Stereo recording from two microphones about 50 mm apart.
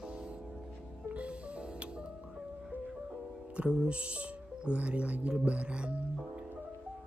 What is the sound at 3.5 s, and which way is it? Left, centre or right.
Speech, centre.